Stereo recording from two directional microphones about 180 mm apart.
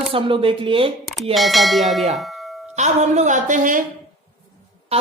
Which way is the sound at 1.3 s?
Centre (ahead or behind).